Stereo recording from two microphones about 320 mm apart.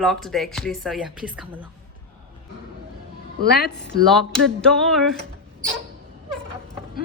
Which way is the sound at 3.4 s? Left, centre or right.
Left.